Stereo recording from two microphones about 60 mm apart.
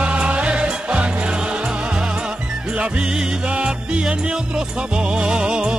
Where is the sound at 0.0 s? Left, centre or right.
Centre.